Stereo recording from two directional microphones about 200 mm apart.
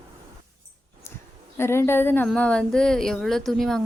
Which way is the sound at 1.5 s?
10° left (ahead or behind).